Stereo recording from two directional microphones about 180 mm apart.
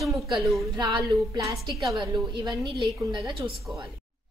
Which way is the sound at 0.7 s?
20° right (ahead or behind).